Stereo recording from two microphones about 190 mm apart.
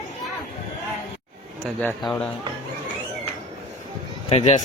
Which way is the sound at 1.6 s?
10° left (ahead or behind).